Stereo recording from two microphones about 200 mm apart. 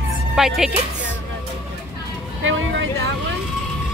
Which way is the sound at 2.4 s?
75° right (ahead or behind).